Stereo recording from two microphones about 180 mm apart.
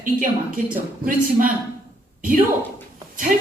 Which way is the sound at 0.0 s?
50° right (ahead or behind).